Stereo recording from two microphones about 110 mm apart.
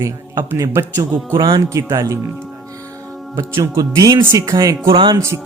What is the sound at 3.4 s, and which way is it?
Speech, 30° right (ahead or behind).